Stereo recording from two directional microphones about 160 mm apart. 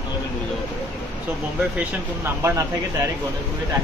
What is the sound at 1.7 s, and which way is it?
Speech, 15° right (ahead or behind).